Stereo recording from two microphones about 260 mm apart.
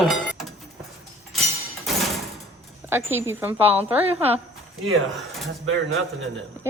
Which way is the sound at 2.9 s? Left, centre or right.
Centre.